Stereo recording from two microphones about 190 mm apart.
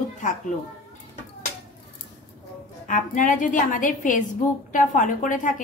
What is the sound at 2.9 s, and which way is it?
A woman's voice, 45° left (ahead or behind).